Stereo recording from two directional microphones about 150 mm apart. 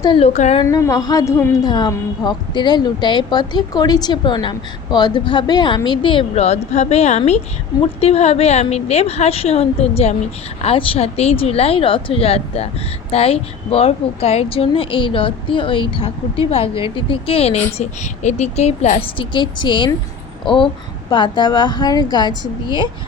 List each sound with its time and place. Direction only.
0.2 s a woman's voice: 45° left (ahead or behind)
0.6 s a woman's voice: 20° left (ahead or behind)
1.6 s a woman's voice: 30° left (ahead or behind)